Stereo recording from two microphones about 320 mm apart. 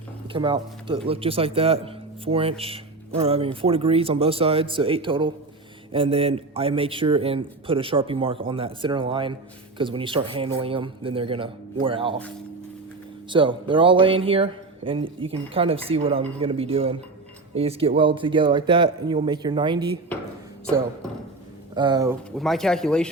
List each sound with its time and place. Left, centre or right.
0.3 s a man's voice: centre
13.3 s a man's voice: centre
21.8 s a man's voice: centre
22.4 s speech: centre